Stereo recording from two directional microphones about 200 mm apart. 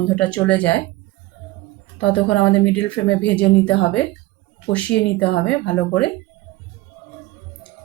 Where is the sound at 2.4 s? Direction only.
65° left (ahead or behind).